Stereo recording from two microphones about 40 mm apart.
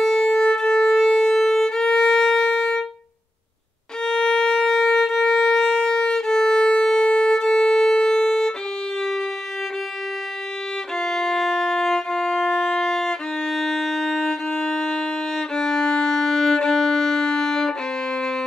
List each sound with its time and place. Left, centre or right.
0.0 s music: centre
1.4 s violin: centre
4.0 s violin: centre
11.0 s music: centre
14.5 s violin: centre